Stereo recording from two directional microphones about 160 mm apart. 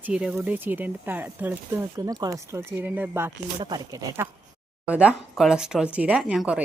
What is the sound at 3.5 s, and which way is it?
Speech, 30° right (ahead or behind).